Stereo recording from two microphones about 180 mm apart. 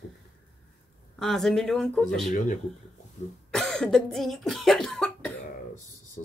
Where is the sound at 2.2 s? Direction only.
45° left (ahead or behind).